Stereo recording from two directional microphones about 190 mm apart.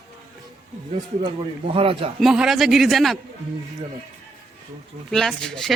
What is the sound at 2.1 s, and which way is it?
Speech, centre (ahead or behind).